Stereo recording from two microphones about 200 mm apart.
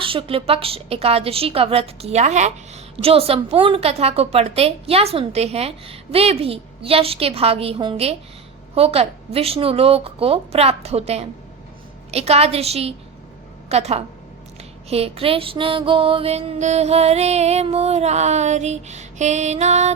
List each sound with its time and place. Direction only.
0.0 s a woman's voice: 25° right (ahead or behind)
12.1 s music: 30° right (ahead or behind)
13.7 s a woman's voice: 30° right (ahead or behind)
14.6 s music: 30° right (ahead or behind)